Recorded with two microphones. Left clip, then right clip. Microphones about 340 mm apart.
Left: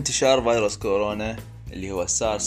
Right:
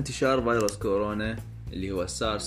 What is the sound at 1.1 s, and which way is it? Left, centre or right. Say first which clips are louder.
Speech: left 3 dB; left.